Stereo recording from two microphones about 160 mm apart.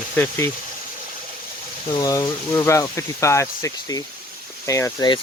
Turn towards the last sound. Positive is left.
turn(degrees=25)  # may be behind; listen again after turning